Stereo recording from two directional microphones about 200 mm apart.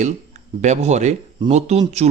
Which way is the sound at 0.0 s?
35° right (ahead or behind).